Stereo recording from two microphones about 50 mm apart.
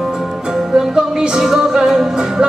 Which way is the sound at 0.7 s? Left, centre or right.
Centre.